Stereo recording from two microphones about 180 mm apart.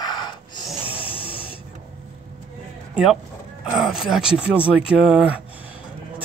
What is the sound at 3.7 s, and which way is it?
Speech, centre (ahead or behind).